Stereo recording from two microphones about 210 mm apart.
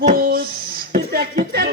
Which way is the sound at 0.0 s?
40° right (ahead or behind).